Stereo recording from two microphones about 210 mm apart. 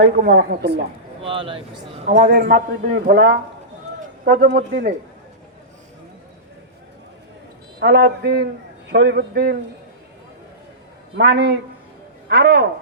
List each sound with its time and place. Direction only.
0.0 s a man's voice: 50° right (ahead or behind)
1.2 s speech: 25° right (ahead or behind)
2.2 s a man's voice: 45° right (ahead or behind)
7.8 s a man's voice: 50° right (ahead or behind)
11.2 s a man's voice: 50° right (ahead or behind)